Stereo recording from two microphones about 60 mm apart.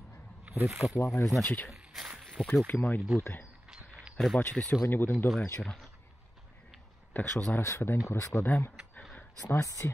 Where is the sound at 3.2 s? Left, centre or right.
Left.